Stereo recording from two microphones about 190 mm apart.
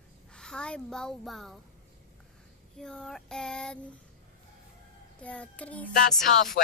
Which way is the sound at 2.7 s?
5° left (ahead or behind).